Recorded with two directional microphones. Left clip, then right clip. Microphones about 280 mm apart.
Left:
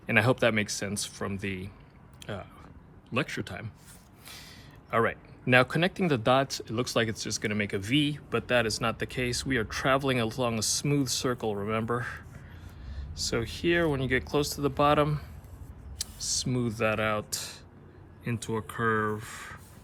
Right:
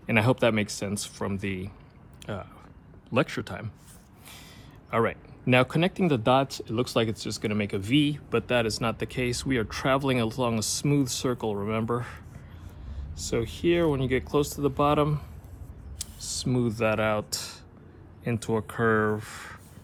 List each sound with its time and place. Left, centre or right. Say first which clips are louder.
0.0 s speech: right 1 dB; centre
4.9 s speech: right 1 dB; centre
13.3 s speech: right 2 dB; centre
14.4 s speech: right 2 dB; left
14.8 s speech: left 1 dB; centre